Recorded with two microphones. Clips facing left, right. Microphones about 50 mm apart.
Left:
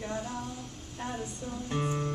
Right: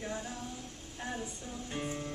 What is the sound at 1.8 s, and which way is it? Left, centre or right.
Music, left.